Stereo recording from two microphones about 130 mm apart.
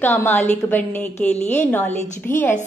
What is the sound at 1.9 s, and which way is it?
Speech, 65° left (ahead or behind).